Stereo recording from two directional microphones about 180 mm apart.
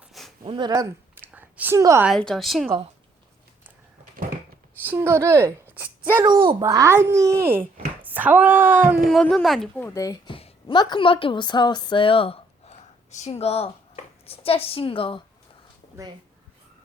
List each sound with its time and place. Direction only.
0.1 s a sound: centre (ahead or behind)
0.4 s a woman's voice: 25° right (ahead or behind)
2.0 s a woman's voice: 5° left (ahead or behind)
4.9 s speech: 15° right (ahead or behind)
6.2 s speech: 25° right (ahead or behind)
9.0 s speech: centre (ahead or behind); by 10.3 s 20° left (ahead or behind)
10.3 s a woman's voice: 30° left (ahead or behind)